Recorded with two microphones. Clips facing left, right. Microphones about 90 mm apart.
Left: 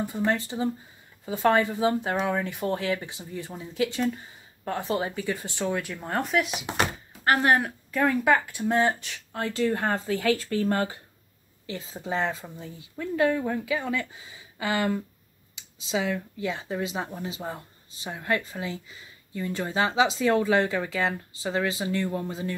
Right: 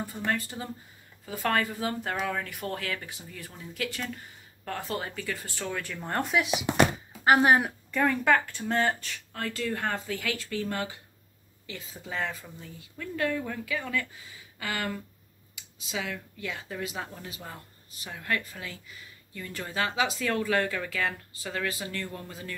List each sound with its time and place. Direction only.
0.0 s speech: 20° left (ahead or behind); by 6.5 s centre (ahead or behind)
7.2 s speech: 15° right (ahead or behind)
7.9 s speech: 5° left (ahead or behind); by 22.6 s 25° left (ahead or behind)